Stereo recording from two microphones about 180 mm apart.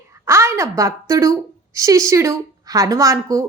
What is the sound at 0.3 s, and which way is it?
A woman's voice, 15° right (ahead or behind).